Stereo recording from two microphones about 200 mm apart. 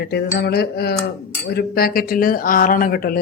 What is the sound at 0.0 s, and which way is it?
Speech, 55° left (ahead or behind).